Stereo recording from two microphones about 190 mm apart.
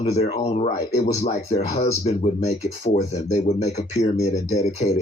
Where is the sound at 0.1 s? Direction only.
35° left (ahead or behind).